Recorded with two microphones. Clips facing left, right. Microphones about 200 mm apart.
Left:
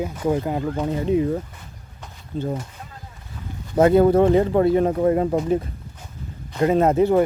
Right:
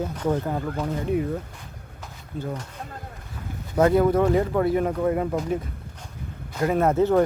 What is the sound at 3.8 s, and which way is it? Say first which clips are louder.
Speech: left 4 dB; 25° left (ahead or behind).